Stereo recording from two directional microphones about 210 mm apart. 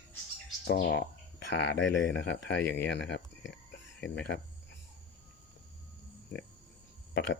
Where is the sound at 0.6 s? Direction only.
50° left (ahead or behind).